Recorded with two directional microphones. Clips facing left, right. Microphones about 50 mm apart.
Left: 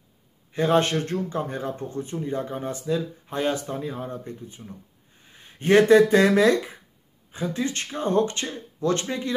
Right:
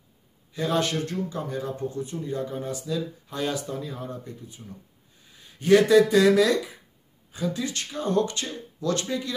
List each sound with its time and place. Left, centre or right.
0.5 s speech: left